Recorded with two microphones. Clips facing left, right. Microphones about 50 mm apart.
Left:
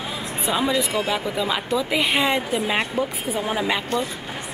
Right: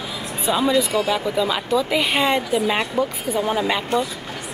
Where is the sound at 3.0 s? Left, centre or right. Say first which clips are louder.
Right 3 dB; centre.